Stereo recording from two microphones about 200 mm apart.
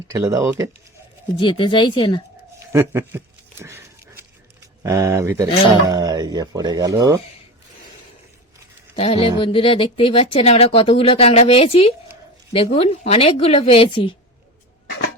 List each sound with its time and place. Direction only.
0.1 s speech: 15° right (ahead or behind)
1.4 s speech: 25° left (ahead or behind)
2.7 s a sound: 10° right (ahead or behind)
4.8 s speech: 15° right (ahead or behind)
9.0 s a woman's voice: 25° left (ahead or behind)